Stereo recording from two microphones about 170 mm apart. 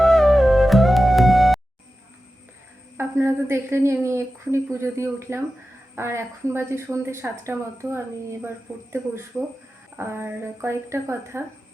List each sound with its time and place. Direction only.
0.0 s music: centre (ahead or behind)
3.0 s a woman's voice: 15° right (ahead or behind)